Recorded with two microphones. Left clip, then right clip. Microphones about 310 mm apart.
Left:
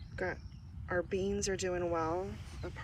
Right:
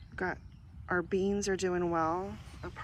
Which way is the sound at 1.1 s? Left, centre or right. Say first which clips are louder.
Right 3 dB; centre.